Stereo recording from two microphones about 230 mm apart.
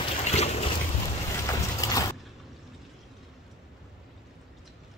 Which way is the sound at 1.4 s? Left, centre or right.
Centre.